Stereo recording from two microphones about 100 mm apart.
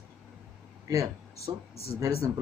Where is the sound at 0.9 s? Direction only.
35° right (ahead or behind).